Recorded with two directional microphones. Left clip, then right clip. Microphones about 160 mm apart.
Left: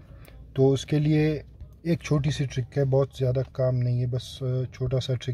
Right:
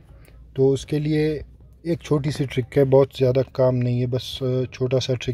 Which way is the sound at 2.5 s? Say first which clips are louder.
Right 11 dB; 30° right (ahead or behind).